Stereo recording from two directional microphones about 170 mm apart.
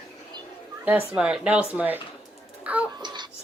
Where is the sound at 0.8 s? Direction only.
10° right (ahead or behind).